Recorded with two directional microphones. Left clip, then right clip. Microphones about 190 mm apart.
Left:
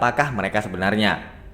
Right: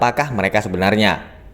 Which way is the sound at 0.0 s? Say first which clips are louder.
Right 3 dB; 35° right (ahead or behind).